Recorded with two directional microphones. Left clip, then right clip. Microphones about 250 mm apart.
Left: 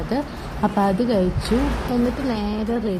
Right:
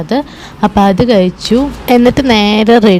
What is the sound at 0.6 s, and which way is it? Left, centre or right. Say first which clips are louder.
Speech: right 11 dB; right.